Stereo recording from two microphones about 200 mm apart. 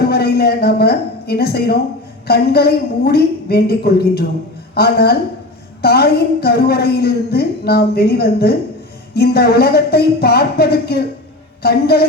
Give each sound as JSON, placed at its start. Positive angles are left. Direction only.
{"t": 0.0, "sound": "a woman's voice", "side_deg": 50}